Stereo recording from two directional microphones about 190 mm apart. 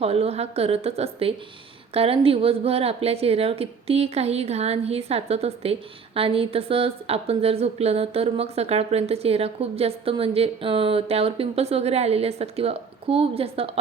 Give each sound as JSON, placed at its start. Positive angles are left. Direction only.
{"t": 0.0, "sound": "a woman's voice", "side_deg": -30}